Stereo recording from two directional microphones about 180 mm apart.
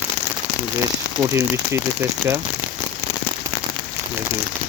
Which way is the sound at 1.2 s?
15° right (ahead or behind).